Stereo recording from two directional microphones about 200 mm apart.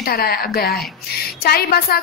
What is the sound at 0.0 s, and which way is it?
A woman's voice, 50° left (ahead or behind).